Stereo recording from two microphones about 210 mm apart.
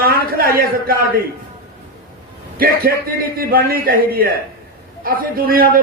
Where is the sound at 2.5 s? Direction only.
45° right (ahead or behind).